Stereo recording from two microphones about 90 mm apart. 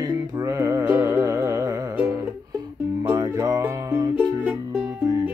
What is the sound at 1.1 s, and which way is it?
Music, 30° right (ahead or behind).